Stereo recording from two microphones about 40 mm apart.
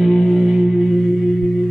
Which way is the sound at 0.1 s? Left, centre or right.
Centre.